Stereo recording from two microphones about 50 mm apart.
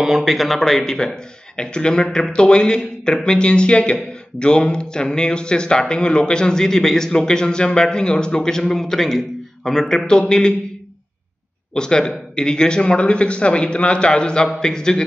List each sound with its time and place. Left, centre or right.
0.0 s speech: centre
11.7 s speech: centre